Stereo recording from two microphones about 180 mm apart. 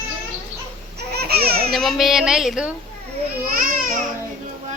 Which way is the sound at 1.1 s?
60° right (ahead or behind).